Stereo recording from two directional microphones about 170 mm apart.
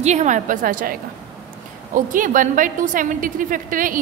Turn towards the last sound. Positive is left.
turn(degrees=-55)  # may be behind; listen again after turning